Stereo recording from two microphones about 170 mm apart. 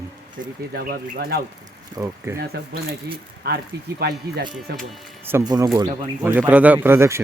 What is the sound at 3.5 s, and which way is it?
Speech, 65° right (ahead or behind).